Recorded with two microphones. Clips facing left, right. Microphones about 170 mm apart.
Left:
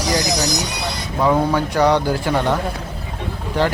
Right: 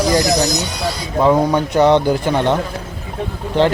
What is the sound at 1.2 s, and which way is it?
Speech, 20° right (ahead or behind).